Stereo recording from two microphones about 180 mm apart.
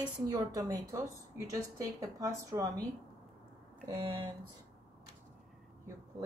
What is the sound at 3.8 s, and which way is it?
Speech, 30° right (ahead or behind).